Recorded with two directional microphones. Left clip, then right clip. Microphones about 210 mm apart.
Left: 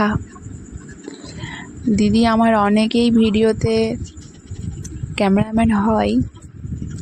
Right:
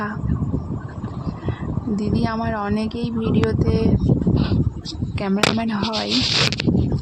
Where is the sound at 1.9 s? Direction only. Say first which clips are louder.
Left 8 dB; 45° left (ahead or behind).